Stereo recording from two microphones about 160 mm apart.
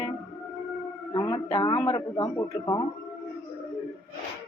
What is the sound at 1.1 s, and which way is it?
A man's voice, 30° left (ahead or behind).